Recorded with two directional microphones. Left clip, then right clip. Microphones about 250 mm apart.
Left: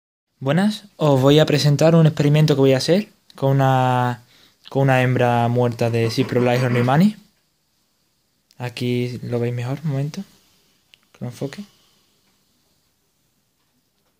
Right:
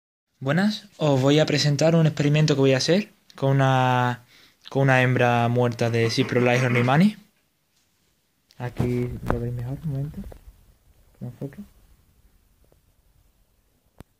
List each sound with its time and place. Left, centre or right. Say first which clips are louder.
0.4 s speech: left 4 dB; centre
8.5 s a sound: left 4 dB; centre
8.9 s speech: left 5 dB; left
11.1 s speech: left 8 dB; left